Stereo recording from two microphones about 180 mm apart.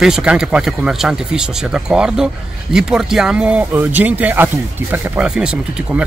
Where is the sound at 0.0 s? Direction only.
5° right (ahead or behind).